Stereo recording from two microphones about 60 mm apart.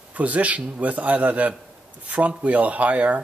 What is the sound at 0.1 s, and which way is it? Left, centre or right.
Speech, right.